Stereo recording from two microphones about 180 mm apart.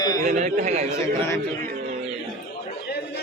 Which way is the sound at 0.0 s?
20° left (ahead or behind).